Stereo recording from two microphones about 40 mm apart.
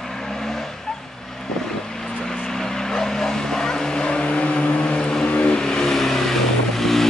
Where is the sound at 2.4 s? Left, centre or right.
Centre.